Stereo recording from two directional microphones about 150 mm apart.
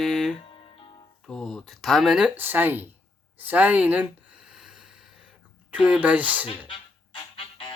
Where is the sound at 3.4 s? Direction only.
10° right (ahead or behind).